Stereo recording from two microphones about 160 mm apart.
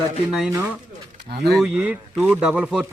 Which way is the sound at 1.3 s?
90° right.